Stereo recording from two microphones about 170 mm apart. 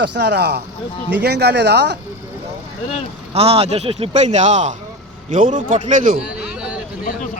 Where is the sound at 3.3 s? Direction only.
35° right (ahead or behind); by 6.1 s 50° right (ahead or behind).